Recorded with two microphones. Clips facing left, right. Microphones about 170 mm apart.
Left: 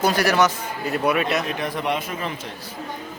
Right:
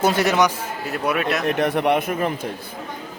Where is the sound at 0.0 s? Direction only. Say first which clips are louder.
Right 1 dB; 25° right (ahead or behind).